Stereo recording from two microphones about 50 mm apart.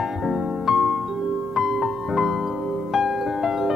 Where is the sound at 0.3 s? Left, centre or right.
Centre.